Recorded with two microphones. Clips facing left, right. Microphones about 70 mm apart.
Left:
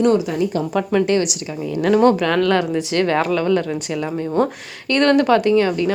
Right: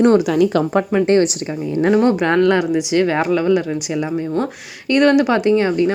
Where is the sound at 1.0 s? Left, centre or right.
Right.